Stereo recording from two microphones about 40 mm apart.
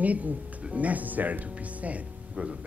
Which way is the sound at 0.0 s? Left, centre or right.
Right.